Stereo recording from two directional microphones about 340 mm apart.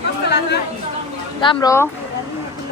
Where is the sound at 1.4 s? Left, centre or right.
Centre.